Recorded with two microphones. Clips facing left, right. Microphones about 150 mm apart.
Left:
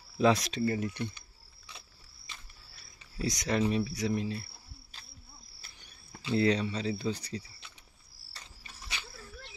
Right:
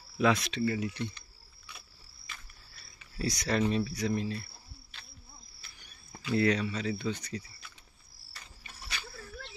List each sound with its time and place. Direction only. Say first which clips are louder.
0.2 s speech: left 1 dB; 40° left (ahead or behind)
3.2 s speech: even; 20° left (ahead or behind)
6.2 s speech: even; 25° left (ahead or behind)